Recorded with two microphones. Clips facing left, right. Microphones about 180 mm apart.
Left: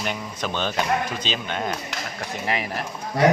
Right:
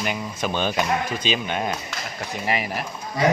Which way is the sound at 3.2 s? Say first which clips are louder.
Left 2 dB; 65° left (ahead or behind).